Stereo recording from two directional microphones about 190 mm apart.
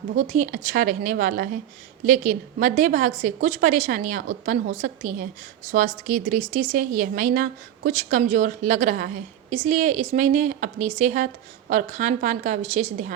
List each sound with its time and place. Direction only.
0.2 s a woman's voice: 45° right (ahead or behind)